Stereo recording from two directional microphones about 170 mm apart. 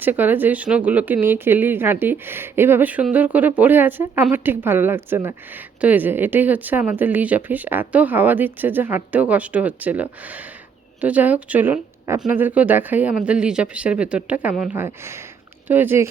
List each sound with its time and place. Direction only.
0.0 s a woman's voice: 10° right (ahead or behind)